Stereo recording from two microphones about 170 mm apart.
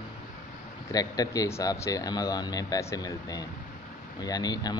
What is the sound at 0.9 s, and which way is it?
Speech, 20° left (ahead or behind).